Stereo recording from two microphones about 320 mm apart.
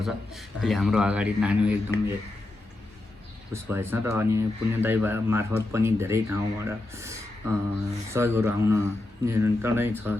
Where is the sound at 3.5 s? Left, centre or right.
Centre.